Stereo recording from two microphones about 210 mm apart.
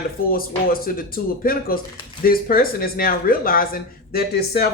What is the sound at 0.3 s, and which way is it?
Speech, 45° left (ahead or behind).